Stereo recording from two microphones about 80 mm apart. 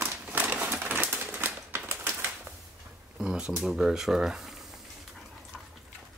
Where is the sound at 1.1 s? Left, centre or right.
Right.